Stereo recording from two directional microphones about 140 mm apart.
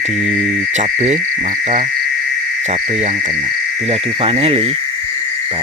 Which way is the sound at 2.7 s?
55° right (ahead or behind).